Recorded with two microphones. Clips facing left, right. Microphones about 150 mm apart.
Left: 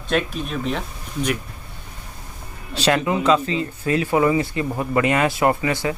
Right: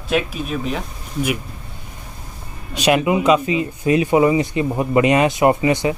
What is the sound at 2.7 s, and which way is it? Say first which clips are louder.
Speech: right 3 dB; 15° right (ahead or behind).